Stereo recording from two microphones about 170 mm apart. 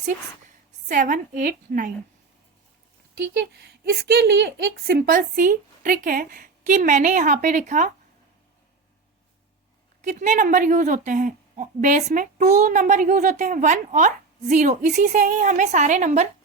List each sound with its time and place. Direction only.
0.9 s a woman's voice: 50° right (ahead or behind)
3.5 s a woman's voice: 75° right (ahead or behind); by 7.9 s 50° right (ahead or behind)
10.0 s a woman's voice: 45° right (ahead or behind)